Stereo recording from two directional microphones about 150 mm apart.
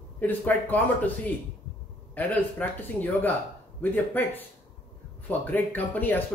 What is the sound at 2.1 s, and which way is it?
A man's voice, 10° left (ahead or behind).